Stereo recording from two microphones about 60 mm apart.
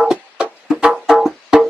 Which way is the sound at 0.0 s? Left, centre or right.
Centre.